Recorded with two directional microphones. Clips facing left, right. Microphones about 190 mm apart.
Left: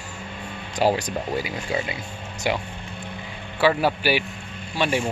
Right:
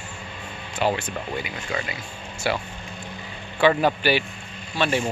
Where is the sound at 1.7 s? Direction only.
25° left (ahead or behind).